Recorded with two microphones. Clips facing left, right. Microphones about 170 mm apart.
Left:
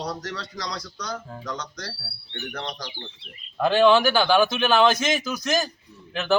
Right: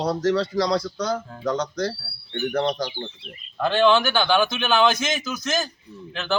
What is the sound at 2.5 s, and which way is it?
Speech, 45° right (ahead or behind).